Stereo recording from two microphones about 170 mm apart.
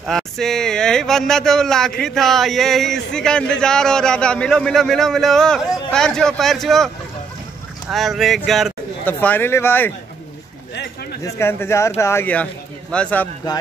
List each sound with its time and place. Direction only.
0.0 s speech: centre (ahead or behind)
7.9 s speech: centre (ahead or behind)
9.0 s speech: 10° left (ahead or behind)
11.2 s speech: 15° left (ahead or behind)